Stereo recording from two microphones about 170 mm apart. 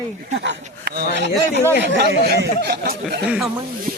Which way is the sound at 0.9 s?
75° right (ahead or behind).